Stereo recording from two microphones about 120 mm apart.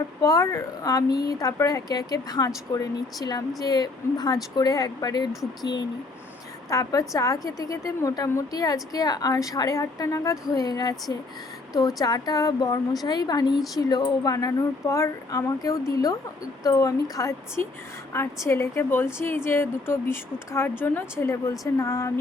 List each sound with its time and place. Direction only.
0.2 s a woman's voice: 30° left (ahead or behind)
6.7 s a woman's voice: 30° left (ahead or behind)